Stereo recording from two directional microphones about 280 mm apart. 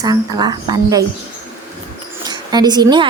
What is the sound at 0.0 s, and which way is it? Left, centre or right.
A woman's voice, centre.